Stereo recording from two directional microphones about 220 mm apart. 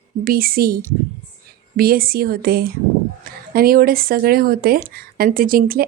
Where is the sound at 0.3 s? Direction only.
40° right (ahead or behind).